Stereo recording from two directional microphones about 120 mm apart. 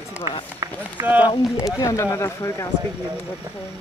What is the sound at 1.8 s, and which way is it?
Speech, 25° left (ahead or behind).